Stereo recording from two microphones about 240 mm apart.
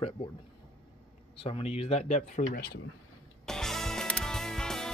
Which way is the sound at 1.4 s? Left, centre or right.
Left.